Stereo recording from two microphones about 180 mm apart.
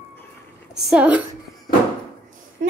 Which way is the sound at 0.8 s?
5° right (ahead or behind).